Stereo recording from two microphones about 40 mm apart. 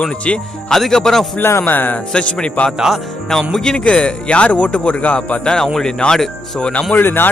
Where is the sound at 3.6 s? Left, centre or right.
Centre; by 5.3 s left.